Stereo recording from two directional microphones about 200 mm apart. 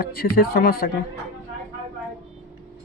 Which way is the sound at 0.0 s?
50° left (ahead or behind).